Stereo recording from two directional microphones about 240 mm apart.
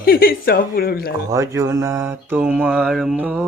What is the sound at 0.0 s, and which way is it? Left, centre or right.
Speech, left.